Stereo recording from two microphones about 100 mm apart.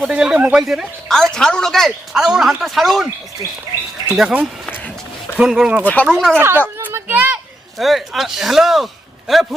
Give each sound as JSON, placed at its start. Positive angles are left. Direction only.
{"t": 0.1, "sound": "speech", "side_deg": -10}
{"t": 4.1, "sound": "speech", "side_deg": -10}
{"t": 4.6, "sound": "run", "side_deg": 15}
{"t": 5.4, "sound": "speech", "side_deg": -10}
{"t": 5.8, "sound": "speech", "side_deg": 15}
{"t": 6.3, "sound": "speech", "side_deg": -25}
{"t": 6.7, "sound": "a sound", "side_deg": -20}
{"t": 7.8, "sound": "speech", "side_deg": 0}